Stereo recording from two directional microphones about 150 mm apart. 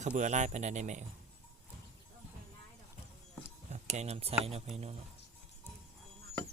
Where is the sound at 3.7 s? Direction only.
50° right (ahead or behind).